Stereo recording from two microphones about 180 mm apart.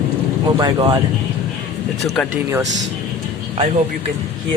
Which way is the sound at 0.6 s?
25° right (ahead or behind).